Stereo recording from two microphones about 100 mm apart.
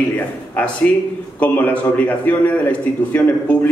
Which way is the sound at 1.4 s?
15° left (ahead or behind).